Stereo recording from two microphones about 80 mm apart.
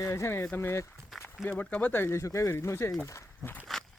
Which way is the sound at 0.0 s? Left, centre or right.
Left.